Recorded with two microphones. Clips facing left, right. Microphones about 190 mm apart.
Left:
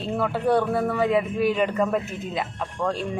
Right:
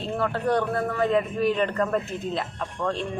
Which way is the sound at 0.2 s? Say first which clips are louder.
Left 2 dB; 5° left (ahead or behind).